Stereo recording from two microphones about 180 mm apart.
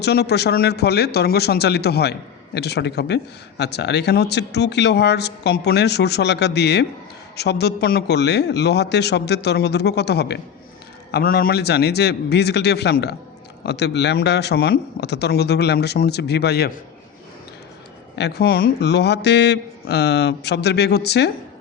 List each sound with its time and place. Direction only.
0.0 s speech: 65° left (ahead or behind)
11.1 s speech: 55° left (ahead or behind)
18.2 s speech: 65° left (ahead or behind)